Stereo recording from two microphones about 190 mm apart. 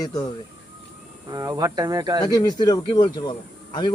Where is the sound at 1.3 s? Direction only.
20° right (ahead or behind).